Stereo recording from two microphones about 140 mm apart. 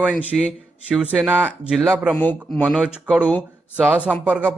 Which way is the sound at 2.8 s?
10° right (ahead or behind).